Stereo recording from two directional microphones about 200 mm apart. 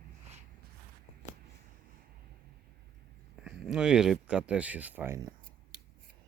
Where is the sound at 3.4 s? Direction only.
5° right (ahead or behind).